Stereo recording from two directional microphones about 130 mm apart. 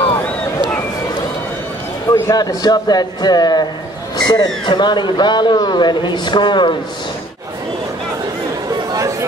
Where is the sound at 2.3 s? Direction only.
30° left (ahead or behind).